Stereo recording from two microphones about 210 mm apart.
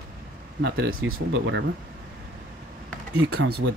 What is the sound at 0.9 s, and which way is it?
Speech, 80° right.